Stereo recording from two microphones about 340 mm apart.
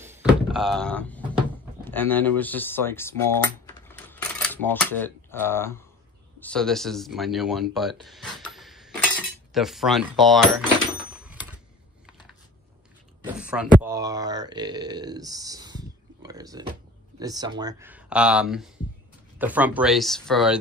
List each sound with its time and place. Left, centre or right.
0.0 s thunk: centre
1.9 s speech: centre
7.7 s cutlery: centre
11.2 s typewriter: centre
12.1 s a sound: centre
13.8 s speech: centre